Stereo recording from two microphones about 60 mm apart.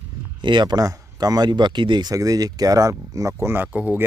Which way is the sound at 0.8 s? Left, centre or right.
Right.